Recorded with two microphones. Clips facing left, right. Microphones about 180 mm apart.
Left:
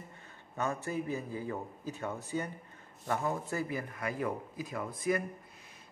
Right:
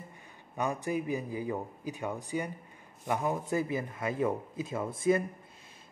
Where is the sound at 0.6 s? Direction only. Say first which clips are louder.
Right 3 dB; 15° right (ahead or behind).